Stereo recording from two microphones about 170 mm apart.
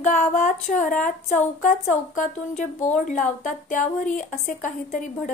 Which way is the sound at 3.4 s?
50° left (ahead or behind).